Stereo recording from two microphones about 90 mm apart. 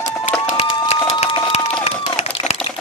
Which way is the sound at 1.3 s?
70° left (ahead or behind).